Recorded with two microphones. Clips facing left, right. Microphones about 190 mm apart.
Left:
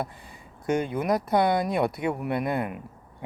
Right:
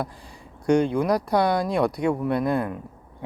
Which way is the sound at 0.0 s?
5° left (ahead or behind).